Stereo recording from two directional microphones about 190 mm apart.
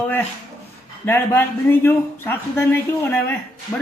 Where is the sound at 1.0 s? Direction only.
10° left (ahead or behind).